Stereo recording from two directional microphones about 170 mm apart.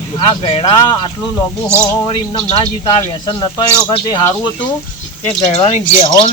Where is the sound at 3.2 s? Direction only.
25° left (ahead or behind).